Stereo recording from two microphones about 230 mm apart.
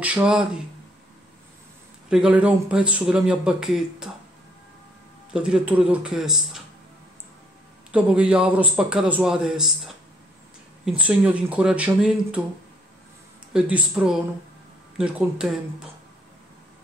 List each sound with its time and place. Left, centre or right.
0.0 s speech: centre
2.0 s speech: centre
5.3 s speech: centre
7.9 s speech: centre
13.5 s speech: centre